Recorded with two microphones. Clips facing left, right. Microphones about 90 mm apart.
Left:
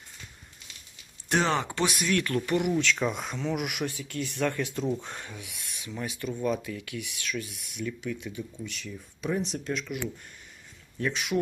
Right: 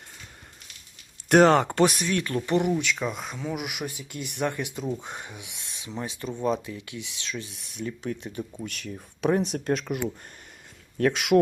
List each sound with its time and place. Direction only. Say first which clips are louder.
1.3 s speech: right 9 dB; 55° right (ahead or behind)
2.0 s speech: even; 25° right (ahead or behind)
2.7 s speech: left 1 dB; 5° right (ahead or behind)
3.8 s speech: left 2 dB; 15° right (ahead or behind); by 10.1 s 45° right (ahead or behind)
10.9 s speech: right 8 dB; 65° right (ahead or behind)